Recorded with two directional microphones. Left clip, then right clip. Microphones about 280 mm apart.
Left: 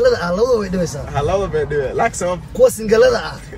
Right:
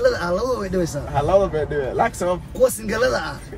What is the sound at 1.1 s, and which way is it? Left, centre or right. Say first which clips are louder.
Speech: right 1 dB; centre.